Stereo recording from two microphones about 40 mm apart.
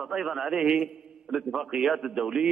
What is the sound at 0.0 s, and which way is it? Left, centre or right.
Speech, centre.